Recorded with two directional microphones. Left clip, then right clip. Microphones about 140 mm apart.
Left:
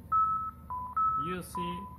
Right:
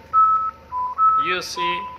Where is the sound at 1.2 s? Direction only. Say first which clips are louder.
Right 13 dB; 5° left (ahead or behind).